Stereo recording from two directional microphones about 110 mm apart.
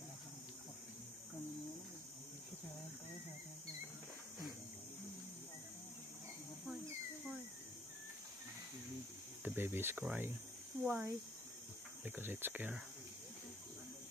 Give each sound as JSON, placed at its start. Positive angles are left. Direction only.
{"t": 9.4, "sound": "cricket", "side_deg": -20}
{"t": 10.0, "sound": "speech", "side_deg": -20}